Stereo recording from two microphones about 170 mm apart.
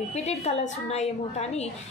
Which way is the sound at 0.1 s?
40° left (ahead or behind).